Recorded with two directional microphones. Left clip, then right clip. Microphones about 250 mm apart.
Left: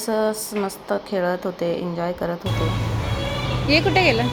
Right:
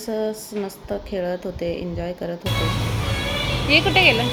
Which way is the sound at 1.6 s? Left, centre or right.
Left.